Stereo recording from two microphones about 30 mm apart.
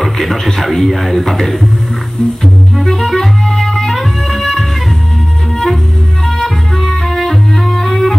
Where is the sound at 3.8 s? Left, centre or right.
Centre.